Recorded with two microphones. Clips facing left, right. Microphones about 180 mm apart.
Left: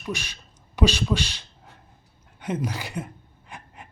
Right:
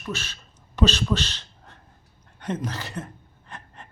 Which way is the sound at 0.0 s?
15° left (ahead or behind).